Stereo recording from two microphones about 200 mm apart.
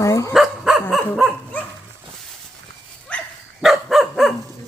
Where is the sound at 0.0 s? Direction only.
15° left (ahead or behind).